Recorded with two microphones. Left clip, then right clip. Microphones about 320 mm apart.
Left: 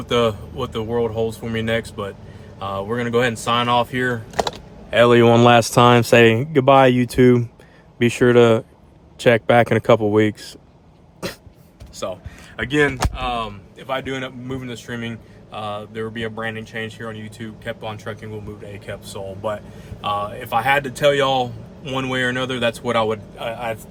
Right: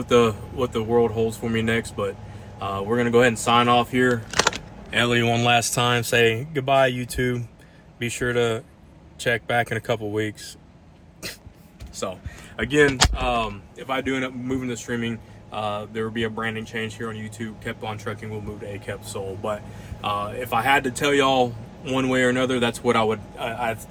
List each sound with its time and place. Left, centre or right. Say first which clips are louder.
0.1 s speech: even; centre
4.9 s speech: left 8 dB; left
11.9 s speech: left 3 dB; centre